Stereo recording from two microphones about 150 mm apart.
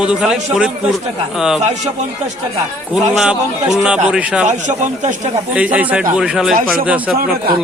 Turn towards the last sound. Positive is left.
turn(degrees=-5)  # may be behind; listen again after turning